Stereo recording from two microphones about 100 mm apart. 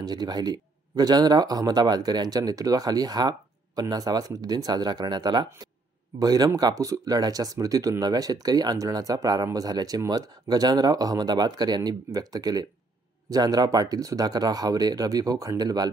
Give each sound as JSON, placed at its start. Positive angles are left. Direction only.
{"t": 0.0, "sound": "speech", "side_deg": -45}